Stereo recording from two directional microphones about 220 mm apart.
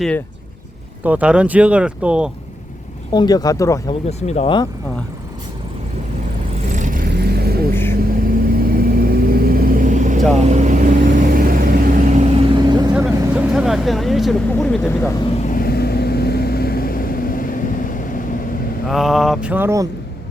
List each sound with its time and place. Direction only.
1.0 s speech: 5° right (ahead or behind)
3.1 s speech: 20° left (ahead or behind)
4.3 s speech: 25° left (ahead or behind)
6.7 s vehicle: 35° right (ahead or behind); by 12.9 s 20° right (ahead or behind)
12.9 s speech: 5° right (ahead or behind)
15.4 s vehicle: 40° left (ahead or behind)
18.9 s speech: centre (ahead or behind)